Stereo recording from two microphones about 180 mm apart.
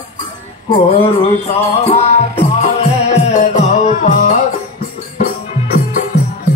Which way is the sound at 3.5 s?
40° left (ahead or behind).